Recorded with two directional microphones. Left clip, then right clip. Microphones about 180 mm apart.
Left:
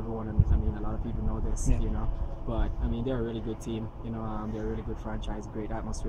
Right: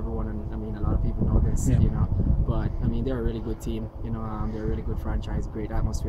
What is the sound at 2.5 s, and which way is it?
Speech, 15° right (ahead or behind).